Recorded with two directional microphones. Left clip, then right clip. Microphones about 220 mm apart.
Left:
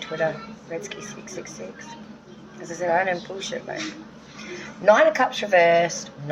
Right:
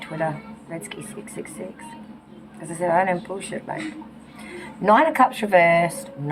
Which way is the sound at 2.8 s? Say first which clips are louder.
Right 2 dB; 10° left (ahead or behind).